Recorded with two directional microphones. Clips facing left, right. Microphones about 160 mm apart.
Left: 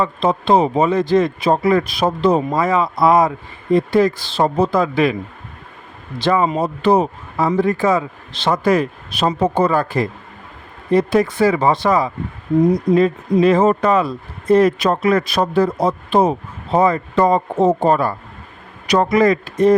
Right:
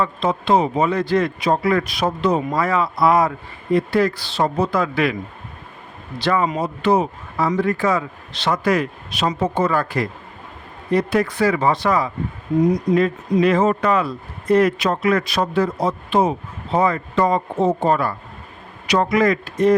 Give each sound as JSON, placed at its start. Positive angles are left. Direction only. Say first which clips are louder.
{"t": 0.0, "sound": "a man's voice", "louder": "left 3 dB", "side_deg": 30}
{"t": 6.1, "sound": "a man's voice", "louder": "left 3 dB", "side_deg": 25}